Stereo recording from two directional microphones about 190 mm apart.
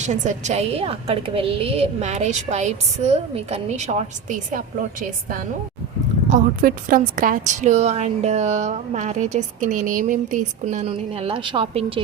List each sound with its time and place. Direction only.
0.0 s a woman's voice: 40° right (ahead or behind)